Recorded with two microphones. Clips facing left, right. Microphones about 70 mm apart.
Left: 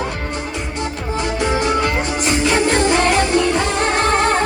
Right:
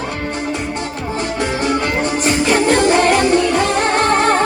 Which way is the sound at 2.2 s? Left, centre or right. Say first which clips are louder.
Right 1 dB; right.